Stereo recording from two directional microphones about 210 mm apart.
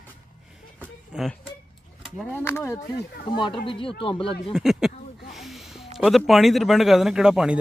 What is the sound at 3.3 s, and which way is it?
Speech, 25° left (ahead or behind).